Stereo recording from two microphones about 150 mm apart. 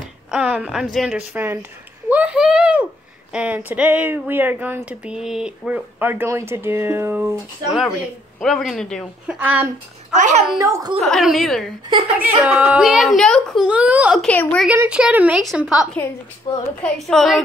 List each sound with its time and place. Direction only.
0.3 s a woman's voice: 10° right (ahead or behind)
8.4 s a woman's voice: centre (ahead or behind)
9.3 s speech: 10° right (ahead or behind)
10.1 s a child's voice: 55° right (ahead or behind)
10.6 s speech: 20° right (ahead or behind)
11.0 s a woman's voice: centre (ahead or behind)
12.2 s speech: 10° right (ahead or behind)
14.2 s a woman's voice: 10° left (ahead or behind)
14.7 s a woman's voice: 10° right (ahead or behind)
16.5 s a woman's voice: 30° left (ahead or behind)
16.8 s a woman's voice: centre (ahead or behind)